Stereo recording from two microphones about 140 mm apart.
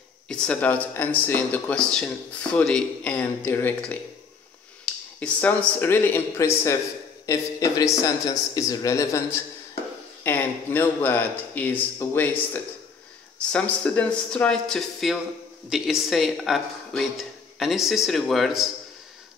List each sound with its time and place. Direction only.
0.3 s speech: 5° left (ahead or behind)
5.2 s speech: 10° left (ahead or behind)